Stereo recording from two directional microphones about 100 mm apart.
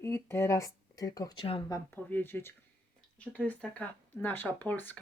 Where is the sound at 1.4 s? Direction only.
65° left (ahead or behind).